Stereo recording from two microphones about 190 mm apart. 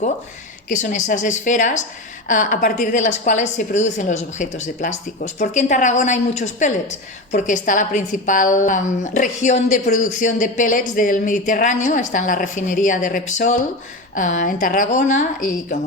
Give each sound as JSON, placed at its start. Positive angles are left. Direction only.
{"t": 0.7, "sound": "a woman's voice", "side_deg": 40}